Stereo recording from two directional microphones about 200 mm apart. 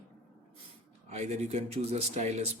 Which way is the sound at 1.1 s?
35° right (ahead or behind).